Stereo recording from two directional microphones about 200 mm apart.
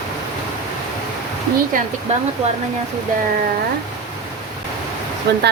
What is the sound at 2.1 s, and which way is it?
Speech, 35° right (ahead or behind).